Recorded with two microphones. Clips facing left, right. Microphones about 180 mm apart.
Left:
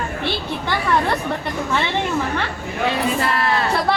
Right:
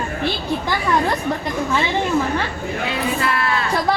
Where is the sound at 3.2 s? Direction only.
35° left (ahead or behind).